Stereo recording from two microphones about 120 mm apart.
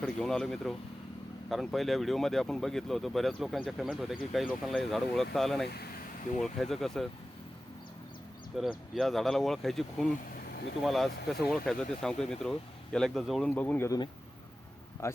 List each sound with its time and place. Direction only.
0.0 s speech: 5° left (ahead or behind)
8.5 s speech: centre (ahead or behind)
13.5 s speech: 15° left (ahead or behind)
15.0 s speech: 25° left (ahead or behind)